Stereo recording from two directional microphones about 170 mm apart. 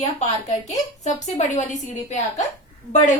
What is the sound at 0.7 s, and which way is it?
A woman's voice, 45° left (ahead or behind).